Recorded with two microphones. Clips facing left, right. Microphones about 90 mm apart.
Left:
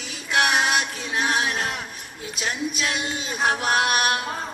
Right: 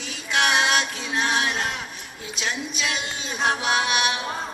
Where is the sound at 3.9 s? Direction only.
50° left (ahead or behind).